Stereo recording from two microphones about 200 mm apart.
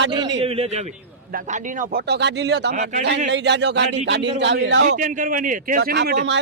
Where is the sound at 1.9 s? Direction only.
55° right (ahead or behind).